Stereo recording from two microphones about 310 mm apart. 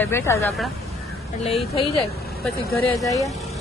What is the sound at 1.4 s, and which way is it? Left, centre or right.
A woman's voice, centre.